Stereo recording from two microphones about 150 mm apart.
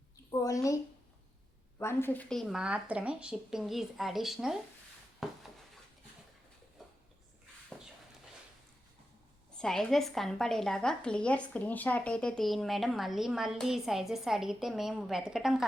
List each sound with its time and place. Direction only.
0.3 s a woman's voice: 20° left (ahead or behind)
1.8 s a woman's voice: 15° left (ahead or behind)
2.3 s a woman's voice: centre (ahead or behind)
5.2 s a sound: centre (ahead or behind)
9.6 s a woman's voice: 5° left (ahead or behind)